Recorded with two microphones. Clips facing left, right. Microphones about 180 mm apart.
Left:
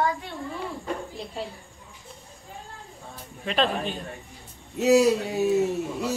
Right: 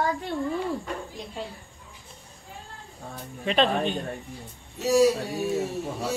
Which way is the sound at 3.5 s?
Centre (ahead or behind).